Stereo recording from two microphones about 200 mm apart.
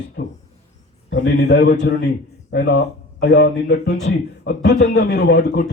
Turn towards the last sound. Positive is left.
turn(degrees=55)  # may be behind; listen again after turning